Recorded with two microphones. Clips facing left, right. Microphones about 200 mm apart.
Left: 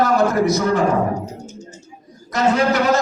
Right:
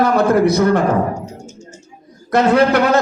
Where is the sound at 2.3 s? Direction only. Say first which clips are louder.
Right 5 dB; 60° right (ahead or behind).